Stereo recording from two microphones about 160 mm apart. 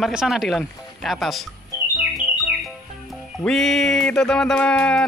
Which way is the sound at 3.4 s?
5° left (ahead or behind).